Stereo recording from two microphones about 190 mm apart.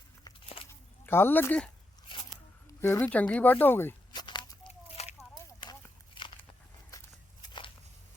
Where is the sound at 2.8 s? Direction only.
10° left (ahead or behind).